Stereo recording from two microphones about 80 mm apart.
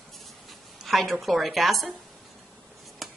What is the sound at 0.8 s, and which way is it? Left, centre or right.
A woman's voice, centre.